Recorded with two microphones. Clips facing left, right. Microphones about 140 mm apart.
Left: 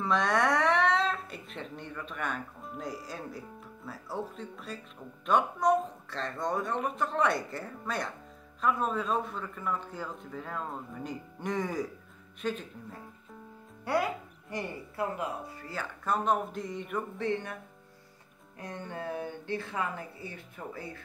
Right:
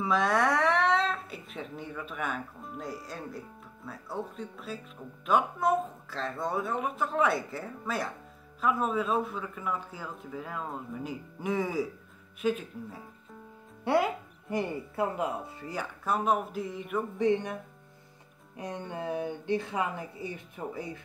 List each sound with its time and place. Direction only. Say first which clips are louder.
0.0 s speech: right 1 dB; 5° right (ahead or behind)
13.8 s speech: right 3 dB; 25° right (ahead or behind); by 17.0 s 5° right (ahead or behind)
17.2 s speech: right 7 dB; 15° right (ahead or behind)
18.6 s speech: right 3 dB; 20° right (ahead or behind)